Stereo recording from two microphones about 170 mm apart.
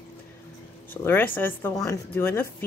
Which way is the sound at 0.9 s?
15° left (ahead or behind).